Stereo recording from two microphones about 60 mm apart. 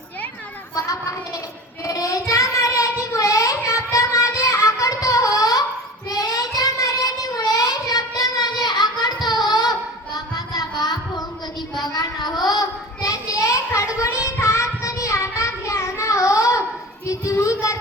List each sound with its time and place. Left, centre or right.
1.8 s child singing: left
6.1 s child singing: left